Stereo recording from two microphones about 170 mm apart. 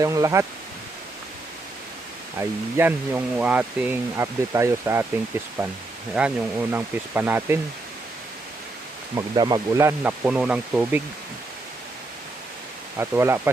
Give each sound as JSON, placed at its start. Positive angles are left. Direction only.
{"t": 0.0, "sound": "speech", "side_deg": -20}
{"t": 2.4, "sound": "speech", "side_deg": -15}
{"t": 9.1, "sound": "speech", "side_deg": -25}
{"t": 13.0, "sound": "speech", "side_deg": -15}